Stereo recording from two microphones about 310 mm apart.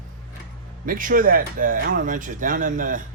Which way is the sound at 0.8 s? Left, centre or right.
Right.